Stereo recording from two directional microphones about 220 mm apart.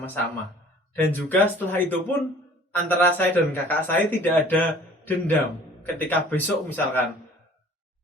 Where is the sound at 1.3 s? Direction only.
10° left (ahead or behind).